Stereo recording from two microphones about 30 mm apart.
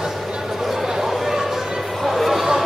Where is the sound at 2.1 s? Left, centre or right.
Centre.